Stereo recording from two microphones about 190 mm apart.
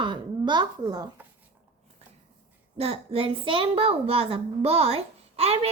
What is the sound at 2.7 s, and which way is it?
A woman's voice, 30° right (ahead or behind).